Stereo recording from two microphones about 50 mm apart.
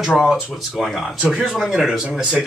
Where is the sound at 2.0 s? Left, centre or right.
Centre.